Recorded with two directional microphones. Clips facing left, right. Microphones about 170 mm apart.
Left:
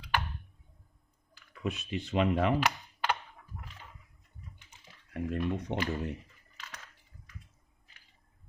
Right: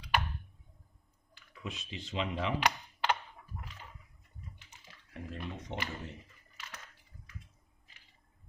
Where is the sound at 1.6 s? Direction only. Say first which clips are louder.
Left 8 dB; 60° left (ahead or behind).